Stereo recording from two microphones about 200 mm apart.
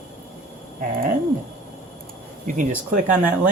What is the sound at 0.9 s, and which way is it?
Speech, 45° right (ahead or behind).